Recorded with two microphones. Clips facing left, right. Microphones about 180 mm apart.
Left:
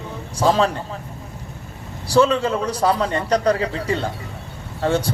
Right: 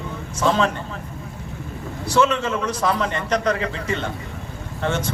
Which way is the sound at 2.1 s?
35° left (ahead or behind).